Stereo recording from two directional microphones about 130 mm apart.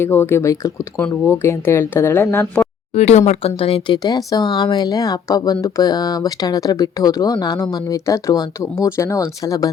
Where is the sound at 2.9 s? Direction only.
55° left (ahead or behind).